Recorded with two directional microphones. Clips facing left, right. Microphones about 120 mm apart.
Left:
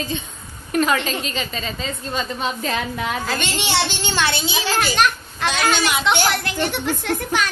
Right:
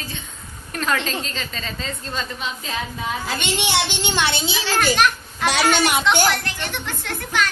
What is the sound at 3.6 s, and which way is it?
Speech, 15° right (ahead or behind).